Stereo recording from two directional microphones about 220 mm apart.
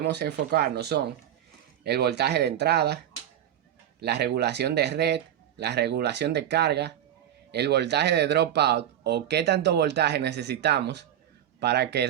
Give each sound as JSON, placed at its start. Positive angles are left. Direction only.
{"t": 0.0, "sound": "speech", "side_deg": -50}
{"t": 4.0, "sound": "speech", "side_deg": -50}